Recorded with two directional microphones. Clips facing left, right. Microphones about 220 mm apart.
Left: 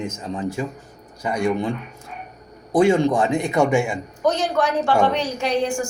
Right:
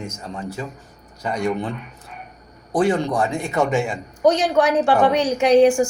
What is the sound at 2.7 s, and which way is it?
A man's voice, 15° left (ahead or behind).